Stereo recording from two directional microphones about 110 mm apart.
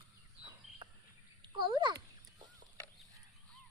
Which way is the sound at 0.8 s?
45° right (ahead or behind).